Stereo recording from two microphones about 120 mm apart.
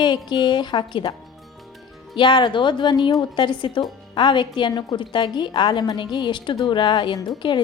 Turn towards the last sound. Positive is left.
turn(degrees=40)  # may be behind; listen again after turning